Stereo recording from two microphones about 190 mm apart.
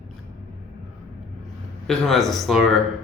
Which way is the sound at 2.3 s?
Centre (ahead or behind).